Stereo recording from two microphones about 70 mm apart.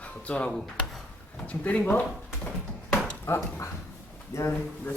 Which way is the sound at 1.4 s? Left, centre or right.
Centre.